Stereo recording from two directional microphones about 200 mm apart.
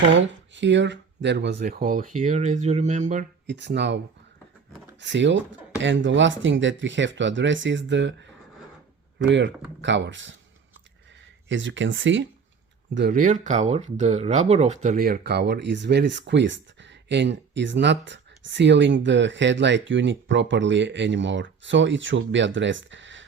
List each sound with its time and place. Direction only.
0.1 s speech: 65° right (ahead or behind); by 3.2 s 35° right (ahead or behind)
3.4 s speech: 60° right (ahead or behind)
11.4 s speech: 65° right (ahead or behind)
12.9 s speech: 55° right (ahead or behind)